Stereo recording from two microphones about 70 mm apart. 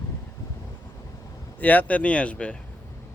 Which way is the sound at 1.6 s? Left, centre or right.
Left.